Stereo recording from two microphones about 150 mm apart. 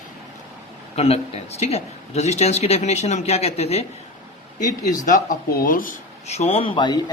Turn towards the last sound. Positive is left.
turn(degrees=30)  # may be behind; listen again after turning